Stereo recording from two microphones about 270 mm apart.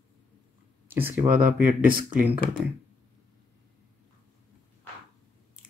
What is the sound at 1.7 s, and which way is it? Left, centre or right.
Speech, right.